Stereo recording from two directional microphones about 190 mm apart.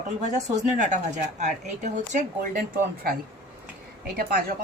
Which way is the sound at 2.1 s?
45° right (ahead or behind).